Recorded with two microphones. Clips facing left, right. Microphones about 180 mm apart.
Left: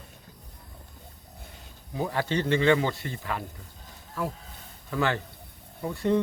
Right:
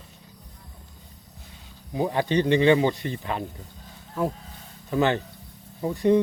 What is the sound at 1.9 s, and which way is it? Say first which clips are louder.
Speech: right 5 dB; 15° right (ahead or behind).